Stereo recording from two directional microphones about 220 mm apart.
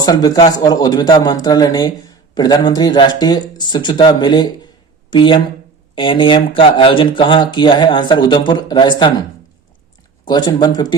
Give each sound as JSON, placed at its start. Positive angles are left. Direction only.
{"t": 0.0, "sound": "a man's voice", "side_deg": 20}
{"t": 10.2, "sound": "speech", "side_deg": 20}